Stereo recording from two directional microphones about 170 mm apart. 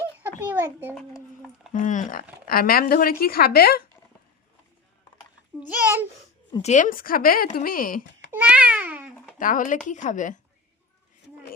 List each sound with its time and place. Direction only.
0.4 s a child's voice: 10° right (ahead or behind)
1.7 s speech: 45° left (ahead or behind)
2.5 s speech: 60° left (ahead or behind)
5.5 s a child's voice: 10° right (ahead or behind)
6.6 s speech: 45° left (ahead or behind)
8.3 s babbling: 10° right (ahead or behind)
9.4 s speech: 50° left (ahead or behind)